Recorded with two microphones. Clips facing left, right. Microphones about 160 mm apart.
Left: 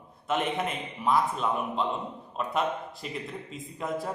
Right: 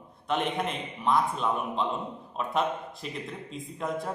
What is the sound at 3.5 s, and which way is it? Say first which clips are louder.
Speech: right 1 dB; centre (ahead or behind).